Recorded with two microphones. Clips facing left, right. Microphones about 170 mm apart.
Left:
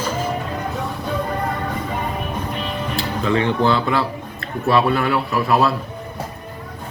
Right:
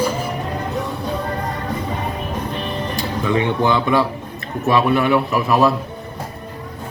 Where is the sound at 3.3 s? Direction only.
20° right (ahead or behind).